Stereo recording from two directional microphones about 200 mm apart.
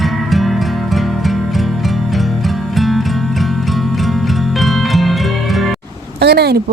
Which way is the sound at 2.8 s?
Centre (ahead or behind).